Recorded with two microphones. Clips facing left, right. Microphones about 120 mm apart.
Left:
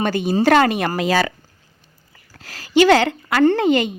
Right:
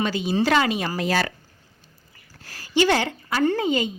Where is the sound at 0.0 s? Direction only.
55° left (ahead or behind); by 1.1 s 75° left (ahead or behind).